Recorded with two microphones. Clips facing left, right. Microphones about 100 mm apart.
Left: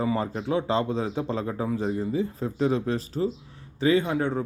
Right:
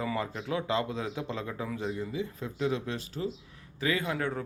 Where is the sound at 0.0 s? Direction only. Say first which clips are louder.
Left 6 dB; 30° left (ahead or behind).